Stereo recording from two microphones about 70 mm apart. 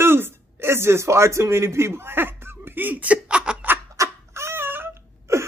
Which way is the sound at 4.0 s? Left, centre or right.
Right.